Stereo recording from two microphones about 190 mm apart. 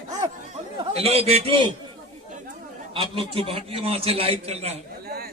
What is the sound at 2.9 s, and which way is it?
A man's voice, 25° right (ahead or behind).